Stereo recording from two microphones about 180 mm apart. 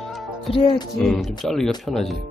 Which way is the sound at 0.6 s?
30° left (ahead or behind).